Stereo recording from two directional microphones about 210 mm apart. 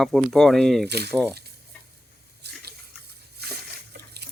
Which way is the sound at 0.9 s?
50° right (ahead or behind).